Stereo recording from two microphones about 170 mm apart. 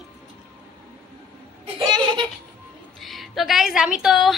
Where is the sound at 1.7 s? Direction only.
25° right (ahead or behind).